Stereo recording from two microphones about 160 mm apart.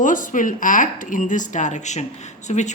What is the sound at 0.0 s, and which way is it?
A woman's voice, 55° left (ahead or behind).